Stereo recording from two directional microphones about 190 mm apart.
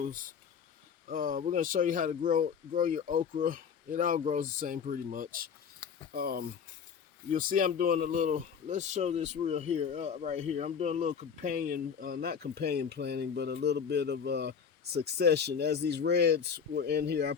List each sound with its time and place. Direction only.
0.0 s speech: 45° right (ahead or behind)